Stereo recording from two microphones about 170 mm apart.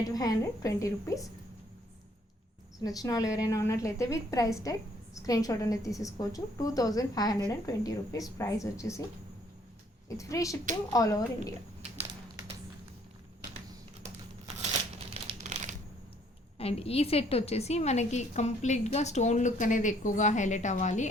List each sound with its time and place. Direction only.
0.1 s a woman's voice: 20° left (ahead or behind)
2.8 s a woman's voice: 20° left (ahead or behind)
10.2 s a woman's voice: 20° left (ahead or behind)
15.1 s crumpling: 35° right (ahead or behind)
16.6 s a woman's voice: 35° left (ahead or behind)